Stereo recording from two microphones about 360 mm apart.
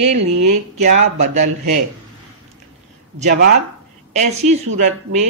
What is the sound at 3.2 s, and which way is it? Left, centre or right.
Speech, right.